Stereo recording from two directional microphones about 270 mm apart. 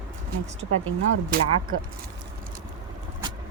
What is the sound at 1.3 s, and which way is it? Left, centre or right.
Speech, right.